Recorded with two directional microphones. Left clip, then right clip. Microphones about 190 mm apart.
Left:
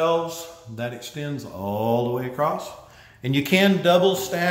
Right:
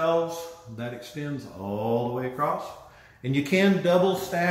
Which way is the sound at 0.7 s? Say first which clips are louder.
Left 5 dB; 30° left (ahead or behind).